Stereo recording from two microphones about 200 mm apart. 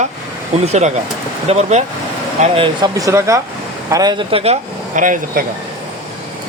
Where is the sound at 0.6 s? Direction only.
35° right (ahead or behind).